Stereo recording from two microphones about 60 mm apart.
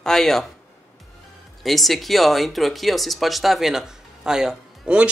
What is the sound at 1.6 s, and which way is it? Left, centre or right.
A man's voice, centre.